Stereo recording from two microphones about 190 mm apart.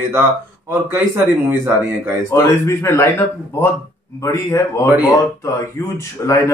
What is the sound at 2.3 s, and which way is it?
Speech, 15° left (ahead or behind).